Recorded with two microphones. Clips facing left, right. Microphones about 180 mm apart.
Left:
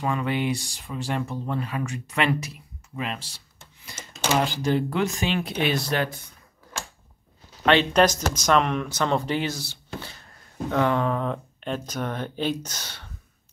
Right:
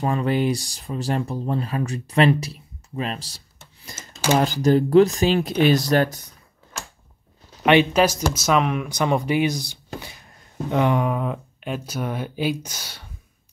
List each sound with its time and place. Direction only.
0.0 s speech: 35° right (ahead or behind)
7.6 s speech: 10° right (ahead or behind)